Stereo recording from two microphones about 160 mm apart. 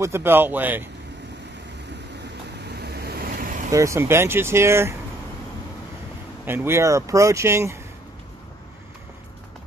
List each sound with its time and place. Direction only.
0.0 s speech: 15° right (ahead or behind)
2.6 s vehicle: 90° right; by 3.6 s 60° right (ahead or behind)
3.7 s speech: 20° right (ahead or behind)
6.4 s speech: 15° right (ahead or behind)